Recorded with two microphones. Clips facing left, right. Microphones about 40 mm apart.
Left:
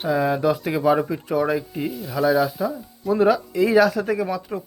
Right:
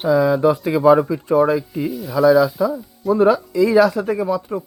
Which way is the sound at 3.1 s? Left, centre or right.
Left.